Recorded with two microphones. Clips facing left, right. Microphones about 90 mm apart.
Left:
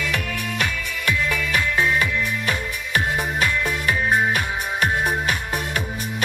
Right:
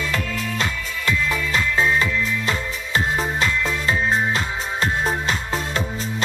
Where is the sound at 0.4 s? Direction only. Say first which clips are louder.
Right 1 dB; 25° right (ahead or behind).